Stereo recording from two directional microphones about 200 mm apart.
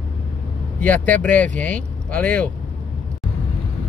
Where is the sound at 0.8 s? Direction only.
10° left (ahead or behind).